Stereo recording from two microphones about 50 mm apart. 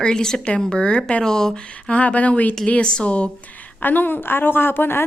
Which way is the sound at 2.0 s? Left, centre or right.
Left.